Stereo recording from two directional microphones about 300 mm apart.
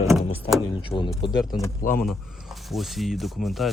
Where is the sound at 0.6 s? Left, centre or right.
Centre.